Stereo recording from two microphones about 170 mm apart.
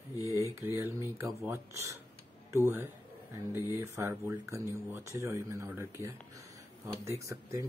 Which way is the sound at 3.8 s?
15° right (ahead or behind).